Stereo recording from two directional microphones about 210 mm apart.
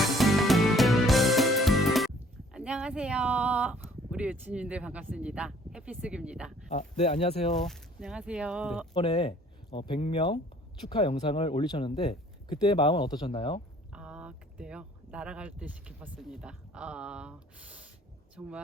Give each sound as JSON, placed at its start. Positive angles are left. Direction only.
{"t": 0.0, "sound": "music", "side_deg": 0}
{"t": 2.5, "sound": "speech", "side_deg": -5}
{"t": 6.7, "sound": "speech", "side_deg": 35}
{"t": 7.5, "sound": "speech", "side_deg": 0}
{"t": 8.9, "sound": "speech", "side_deg": 20}
{"t": 13.9, "sound": "speech", "side_deg": -5}